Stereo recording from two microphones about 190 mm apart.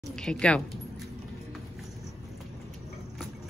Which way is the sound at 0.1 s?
5° left (ahead or behind).